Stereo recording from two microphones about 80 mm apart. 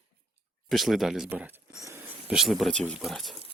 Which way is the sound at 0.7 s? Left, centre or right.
Centre.